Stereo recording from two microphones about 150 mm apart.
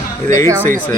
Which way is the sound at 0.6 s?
65° right (ahead or behind).